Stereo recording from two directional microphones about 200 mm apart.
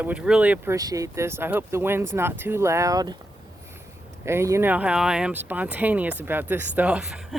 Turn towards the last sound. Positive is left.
turn(degrees=-5)  # may be behind; listen again after turning